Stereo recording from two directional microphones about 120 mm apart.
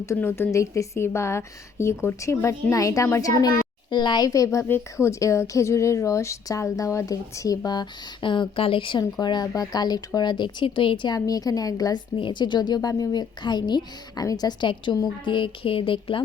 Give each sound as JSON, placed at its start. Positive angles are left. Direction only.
{"t": 0.0, "sound": "a woman's voice", "side_deg": 25}
{"t": 12.1, "sound": "a woman's voice", "side_deg": 40}